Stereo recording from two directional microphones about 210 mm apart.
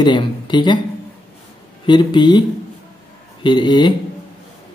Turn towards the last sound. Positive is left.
turn(degrees=20)  # may be behind; listen again after turning